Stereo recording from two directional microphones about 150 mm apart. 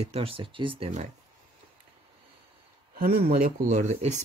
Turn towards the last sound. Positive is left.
turn(degrees=-50)  # may be behind; listen again after turning